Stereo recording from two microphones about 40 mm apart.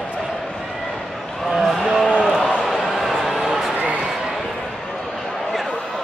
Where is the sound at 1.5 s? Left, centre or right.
Centre.